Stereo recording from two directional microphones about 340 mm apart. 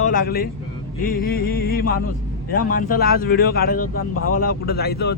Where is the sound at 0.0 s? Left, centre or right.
Left.